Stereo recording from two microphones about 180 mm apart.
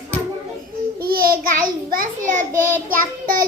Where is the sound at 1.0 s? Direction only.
55° right (ahead or behind).